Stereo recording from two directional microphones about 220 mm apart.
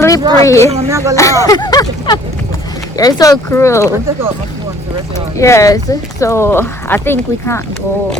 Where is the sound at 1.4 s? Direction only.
15° left (ahead or behind).